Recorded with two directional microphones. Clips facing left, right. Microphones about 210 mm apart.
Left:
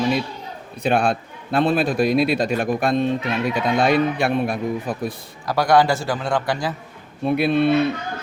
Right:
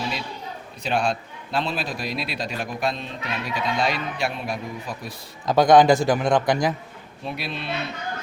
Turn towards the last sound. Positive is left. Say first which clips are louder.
# left 13 dB
turn(degrees=55)  # may be behind; listen again after turning